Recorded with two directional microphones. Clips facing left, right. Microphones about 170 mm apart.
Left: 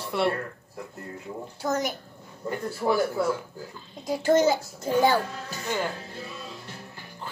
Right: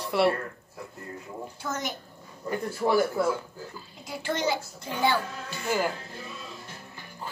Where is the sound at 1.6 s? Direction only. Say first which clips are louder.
Left 7 dB; 40° left (ahead or behind).